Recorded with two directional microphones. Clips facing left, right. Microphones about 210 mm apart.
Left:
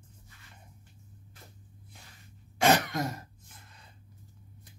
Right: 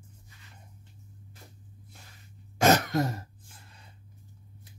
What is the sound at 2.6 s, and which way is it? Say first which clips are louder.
Throat clearing: right 2 dB; 45° right (ahead or behind).